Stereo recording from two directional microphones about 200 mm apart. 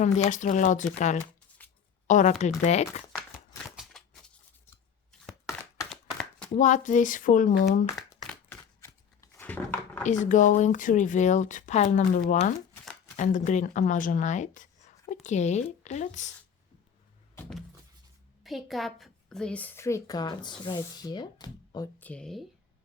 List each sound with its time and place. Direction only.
0.0 s speech: 40° left (ahead or behind)
3.8 s a sound: centre (ahead or behind)
6.6 s speech: 40° left (ahead or behind)
7.9 s a sound: 15° left (ahead or behind)
10.0 s speech: 40° left (ahead or behind)
18.4 s a woman's voice: centre (ahead or behind); by 21.8 s 20° left (ahead or behind)
21.9 s speech: 5° left (ahead or behind)